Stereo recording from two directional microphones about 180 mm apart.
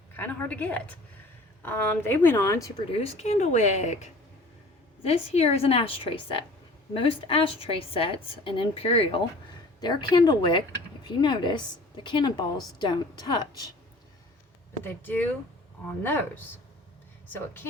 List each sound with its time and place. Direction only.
0.2 s a woman's voice: 10° left (ahead or behind)
3.0 s a woman's voice: 35° left (ahead or behind)
14.8 s a woman's voice: 10° left (ahead or behind)
17.3 s a woman's voice: 10° left (ahead or behind)